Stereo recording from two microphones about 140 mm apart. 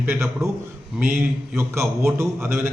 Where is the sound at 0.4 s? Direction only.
20° right (ahead or behind).